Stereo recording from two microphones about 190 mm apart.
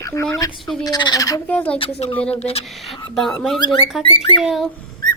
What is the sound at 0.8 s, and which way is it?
Speech, 20° left (ahead or behind).